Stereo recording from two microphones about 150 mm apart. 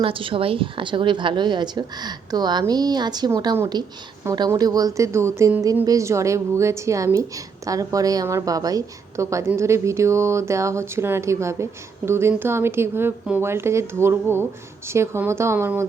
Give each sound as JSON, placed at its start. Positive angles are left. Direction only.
{"t": 0.0, "sound": "a woman's voice", "side_deg": -35}